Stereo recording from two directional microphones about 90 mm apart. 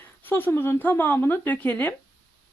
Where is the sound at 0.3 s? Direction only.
20° left (ahead or behind).